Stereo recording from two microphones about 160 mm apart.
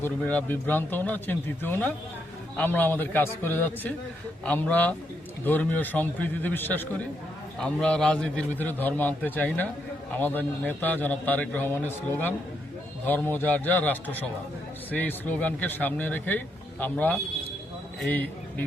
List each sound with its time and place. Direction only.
0.0 s a man's voice: 10° left (ahead or behind)